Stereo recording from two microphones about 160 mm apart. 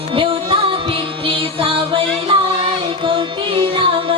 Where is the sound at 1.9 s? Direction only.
30° right (ahead or behind).